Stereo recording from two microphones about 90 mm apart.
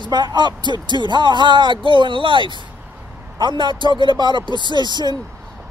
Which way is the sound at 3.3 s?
55° right (ahead or behind).